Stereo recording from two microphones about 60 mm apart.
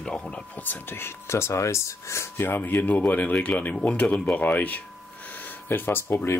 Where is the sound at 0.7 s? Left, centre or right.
Left.